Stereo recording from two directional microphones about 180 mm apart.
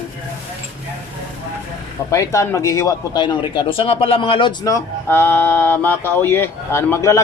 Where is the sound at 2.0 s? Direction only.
15° left (ahead or behind).